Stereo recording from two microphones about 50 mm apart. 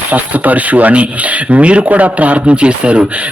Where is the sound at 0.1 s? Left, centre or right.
Right.